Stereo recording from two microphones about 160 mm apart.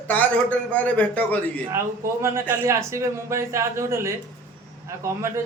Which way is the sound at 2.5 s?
15° right (ahead or behind).